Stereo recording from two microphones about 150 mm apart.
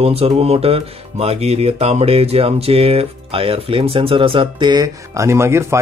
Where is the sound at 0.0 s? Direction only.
40° right (ahead or behind).